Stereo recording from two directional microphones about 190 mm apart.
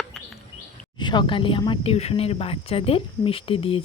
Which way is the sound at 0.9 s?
25° left (ahead or behind).